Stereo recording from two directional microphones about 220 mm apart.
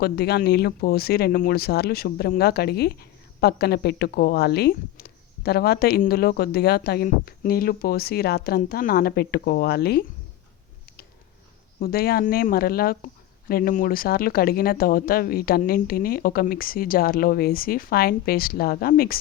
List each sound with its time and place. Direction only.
0.0 s speech: 45° left (ahead or behind)
11.8 s speech: 45° left (ahead or behind)